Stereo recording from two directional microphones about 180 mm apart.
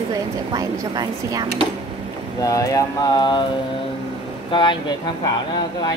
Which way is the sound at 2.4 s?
20° left (ahead or behind).